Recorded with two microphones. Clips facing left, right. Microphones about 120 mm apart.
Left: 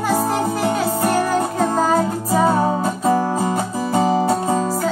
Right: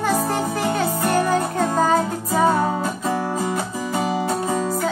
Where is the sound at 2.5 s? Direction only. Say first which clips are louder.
Left 2 dB; 30° left (ahead or behind).